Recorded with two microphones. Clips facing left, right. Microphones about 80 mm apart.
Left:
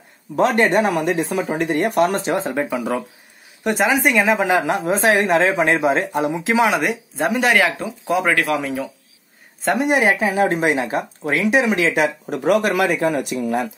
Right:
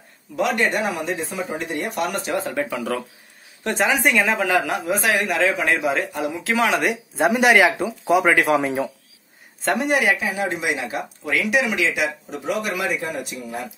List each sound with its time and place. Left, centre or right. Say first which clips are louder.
0.4 s speech: left 5 dB; left
0.9 s speech: left 6 dB; left
2.0 s a man's voice: left 4 dB; left
3.6 s speech: left 2 dB; centre
4.4 s a man's voice: left 3 dB; left
6.7 s speech: left 1 dB; centre
7.2 s speech: right 2 dB; centre
8.4 s a man's voice: right 2 dB; right
9.6 s a woman's voice: left 3 dB; centre
10.0 s speech: left 5 dB; left
12.3 s speech: left 8 dB; left